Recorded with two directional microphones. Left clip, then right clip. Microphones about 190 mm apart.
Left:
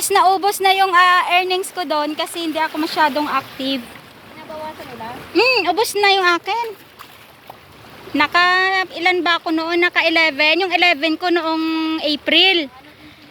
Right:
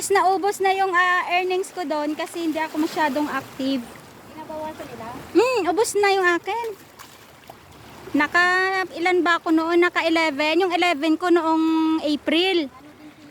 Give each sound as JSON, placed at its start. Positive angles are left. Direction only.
{"t": 0.0, "sound": "speech", "side_deg": -15}
{"t": 5.3, "sound": "speech", "side_deg": -20}
{"t": 8.1, "sound": "speech", "side_deg": -15}